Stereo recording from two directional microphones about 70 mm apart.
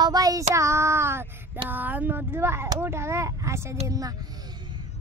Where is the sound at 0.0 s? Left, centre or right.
Right.